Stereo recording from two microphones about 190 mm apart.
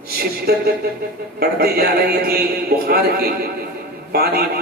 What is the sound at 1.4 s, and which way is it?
A man's voice, 55° right (ahead or behind).